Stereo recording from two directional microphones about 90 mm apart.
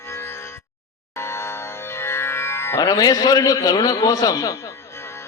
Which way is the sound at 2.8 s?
45° left (ahead or behind).